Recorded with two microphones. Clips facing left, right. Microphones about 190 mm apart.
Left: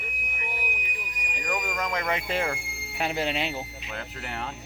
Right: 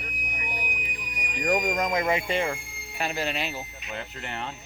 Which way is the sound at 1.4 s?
40° right (ahead or behind).